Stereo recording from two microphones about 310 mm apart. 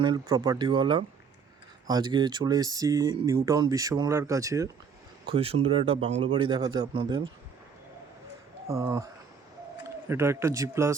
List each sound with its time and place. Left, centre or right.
0.0 s speech: centre
8.6 s speech: centre
10.1 s speech: centre